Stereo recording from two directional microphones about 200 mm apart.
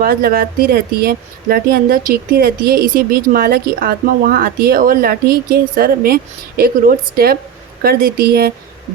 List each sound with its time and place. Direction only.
0.0 s speech: 50° right (ahead or behind)